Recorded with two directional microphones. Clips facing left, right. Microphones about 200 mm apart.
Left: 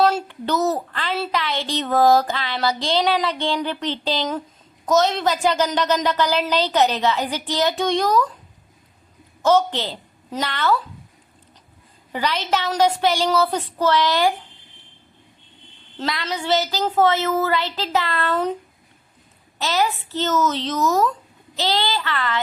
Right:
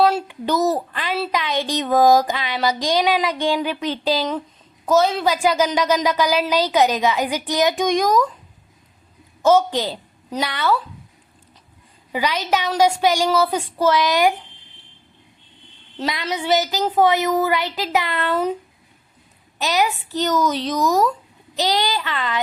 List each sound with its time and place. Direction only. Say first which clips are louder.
0.3 s a sound: right 2 dB; 15° right (ahead or behind)
1.3 s a woman's voice: right 2 dB; 15° right (ahead or behind)
9.4 s a woman's voice: right 2 dB; 10° right (ahead or behind)
12.1 s a woman's voice: right 2 dB; 10° right (ahead or behind)
16.0 s a woman's voice: right 2 dB; 20° right (ahead or behind)
19.5 s a woman's voice: right 1 dB; 15° right (ahead or behind)